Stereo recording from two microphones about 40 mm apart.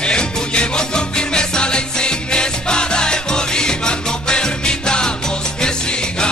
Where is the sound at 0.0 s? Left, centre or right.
Left.